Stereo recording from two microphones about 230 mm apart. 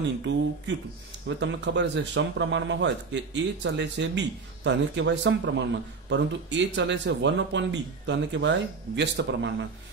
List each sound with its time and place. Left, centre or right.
0.2 s speech: right